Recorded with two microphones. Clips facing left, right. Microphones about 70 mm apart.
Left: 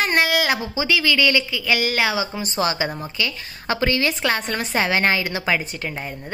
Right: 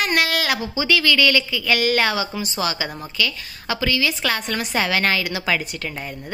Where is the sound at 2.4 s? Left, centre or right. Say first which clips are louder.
Left 2 dB; left.